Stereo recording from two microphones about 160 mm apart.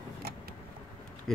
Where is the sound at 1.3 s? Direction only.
5° left (ahead or behind).